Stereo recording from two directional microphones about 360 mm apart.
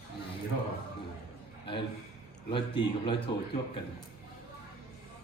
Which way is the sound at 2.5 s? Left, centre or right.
Centre.